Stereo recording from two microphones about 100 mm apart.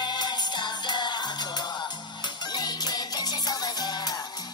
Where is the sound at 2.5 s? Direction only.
45° left (ahead or behind).